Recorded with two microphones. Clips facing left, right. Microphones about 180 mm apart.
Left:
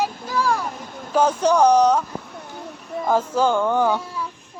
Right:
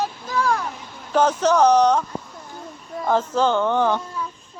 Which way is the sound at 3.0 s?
10° left (ahead or behind).